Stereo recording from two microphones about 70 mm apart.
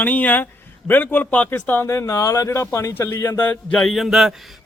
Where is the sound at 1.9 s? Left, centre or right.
Left.